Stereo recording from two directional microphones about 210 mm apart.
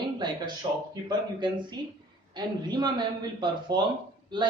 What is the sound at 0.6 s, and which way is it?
A man's voice, 20° right (ahead or behind).